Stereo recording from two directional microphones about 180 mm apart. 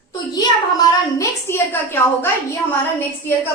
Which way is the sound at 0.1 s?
20° left (ahead or behind).